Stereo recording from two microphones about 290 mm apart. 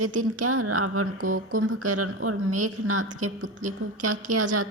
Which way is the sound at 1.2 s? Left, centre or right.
Right.